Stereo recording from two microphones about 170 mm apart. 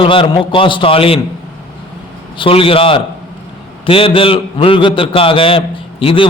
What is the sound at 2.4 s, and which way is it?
A man's voice, 35° left (ahead or behind).